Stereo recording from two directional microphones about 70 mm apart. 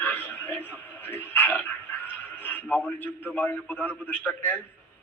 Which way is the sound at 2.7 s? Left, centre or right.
Left.